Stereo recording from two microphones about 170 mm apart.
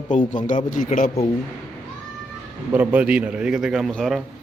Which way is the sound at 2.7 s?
10° right (ahead or behind).